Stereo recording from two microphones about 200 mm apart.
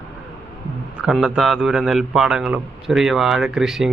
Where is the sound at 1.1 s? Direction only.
5° right (ahead or behind).